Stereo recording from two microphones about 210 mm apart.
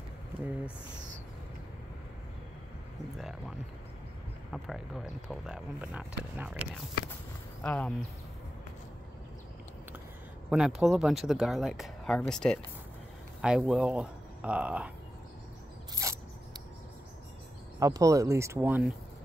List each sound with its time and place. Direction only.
3.2 s speech: centre (ahead or behind)
7.6 s speech: 5° left (ahead or behind)
10.5 s speech: 5° right (ahead or behind)
15.9 s a sound: 15° right (ahead or behind)
17.7 s speech: 15° right (ahead or behind)